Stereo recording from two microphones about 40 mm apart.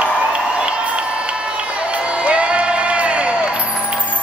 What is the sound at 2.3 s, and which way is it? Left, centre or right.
Crowd, right.